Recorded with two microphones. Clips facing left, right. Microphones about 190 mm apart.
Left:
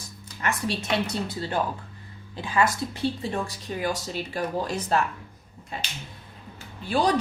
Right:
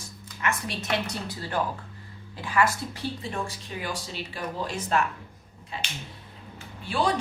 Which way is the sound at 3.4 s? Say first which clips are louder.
Left 5 dB; 45° left (ahead or behind).